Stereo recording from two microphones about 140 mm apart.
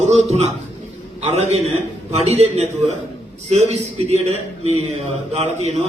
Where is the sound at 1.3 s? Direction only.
50° right (ahead or behind).